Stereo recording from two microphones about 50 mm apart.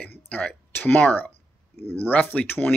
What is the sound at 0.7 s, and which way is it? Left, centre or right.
Speech, left.